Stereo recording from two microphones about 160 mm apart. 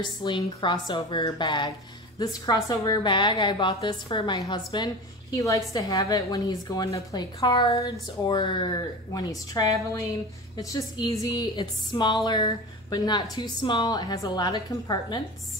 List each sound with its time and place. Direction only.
0.0 s a woman's voice: 30° left (ahead or behind)